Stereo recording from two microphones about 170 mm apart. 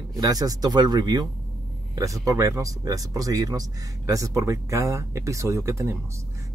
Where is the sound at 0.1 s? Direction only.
20° right (ahead or behind).